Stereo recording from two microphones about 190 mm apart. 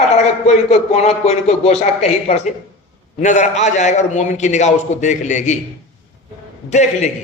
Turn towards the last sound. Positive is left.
turn(degrees=35)  # may be behind; listen again after turning